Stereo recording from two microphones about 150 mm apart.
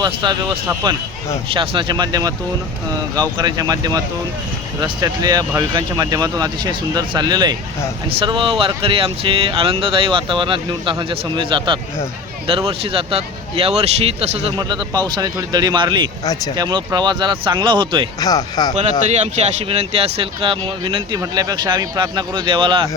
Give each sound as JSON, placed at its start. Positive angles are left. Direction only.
{"t": 0.0, "sound": "speech", "side_deg": -30}
{"t": 14.5, "sound": "speech", "side_deg": -30}
{"t": 16.2, "sound": "speech", "side_deg": 25}
{"t": 16.6, "sound": "speech", "side_deg": -30}
{"t": 18.2, "sound": "speech", "side_deg": 25}
{"t": 18.8, "sound": "speech", "side_deg": -50}